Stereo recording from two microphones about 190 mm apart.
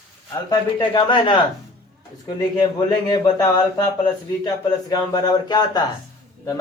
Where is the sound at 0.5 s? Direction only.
25° left (ahead or behind).